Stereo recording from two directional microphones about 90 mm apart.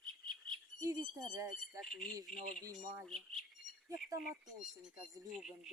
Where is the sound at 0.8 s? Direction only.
40° right (ahead or behind).